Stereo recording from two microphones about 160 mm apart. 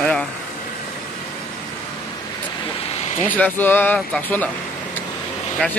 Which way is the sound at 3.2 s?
10° left (ahead or behind).